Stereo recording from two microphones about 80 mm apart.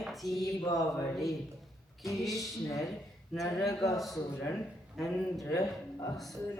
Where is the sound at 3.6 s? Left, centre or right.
Left.